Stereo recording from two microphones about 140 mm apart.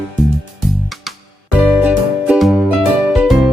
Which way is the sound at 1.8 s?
10° right (ahead or behind).